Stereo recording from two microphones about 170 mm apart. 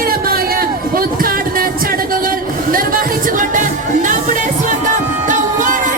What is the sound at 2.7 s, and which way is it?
Music, 55° right (ahead or behind).